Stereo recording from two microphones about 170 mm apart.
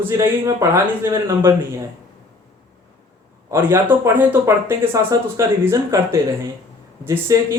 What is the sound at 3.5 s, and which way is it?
Speech, 15° right (ahead or behind).